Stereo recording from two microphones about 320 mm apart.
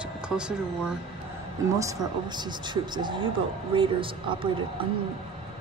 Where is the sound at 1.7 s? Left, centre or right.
Centre.